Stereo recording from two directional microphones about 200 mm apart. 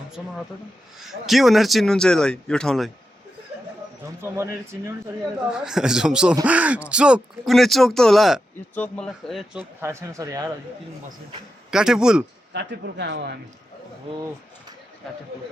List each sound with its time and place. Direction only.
1.0 s speech: centre (ahead or behind)
4.2 s speech: 15° right (ahead or behind)
11.7 s speech: 5° right (ahead or behind)
12.5 s speech: 60° right (ahead or behind)